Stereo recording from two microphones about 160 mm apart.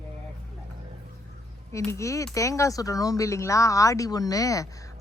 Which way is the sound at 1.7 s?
20° left (ahead or behind).